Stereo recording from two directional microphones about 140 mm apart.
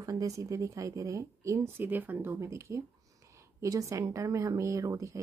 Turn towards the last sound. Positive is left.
turn(degrees=-20)  # may be behind; listen again after turning